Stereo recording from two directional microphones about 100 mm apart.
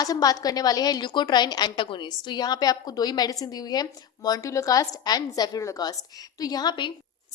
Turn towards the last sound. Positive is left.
turn(degrees=50)  # may be behind; listen again after turning